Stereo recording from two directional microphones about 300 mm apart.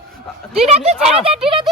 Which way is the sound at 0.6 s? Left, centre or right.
Centre.